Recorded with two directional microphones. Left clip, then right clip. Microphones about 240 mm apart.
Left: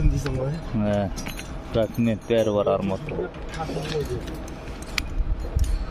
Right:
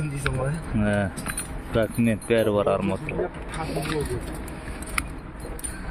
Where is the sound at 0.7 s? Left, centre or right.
Centre.